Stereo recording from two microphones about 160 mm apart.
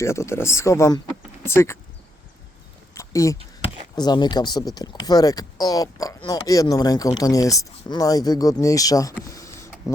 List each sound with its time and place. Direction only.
0.0 s speech: 15° left (ahead or behind)
2.9 s a sound: 20° left (ahead or behind)
3.6 s speech: 25° left (ahead or behind)